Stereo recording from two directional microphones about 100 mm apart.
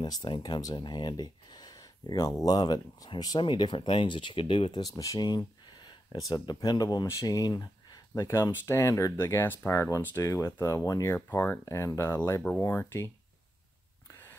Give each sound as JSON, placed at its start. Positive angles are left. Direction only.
{"t": 0.0, "sound": "speech", "side_deg": 50}
{"t": 3.3, "sound": "speech", "side_deg": 50}
{"t": 11.1, "sound": "speech", "side_deg": 20}
{"t": 11.6, "sound": "speech", "side_deg": 35}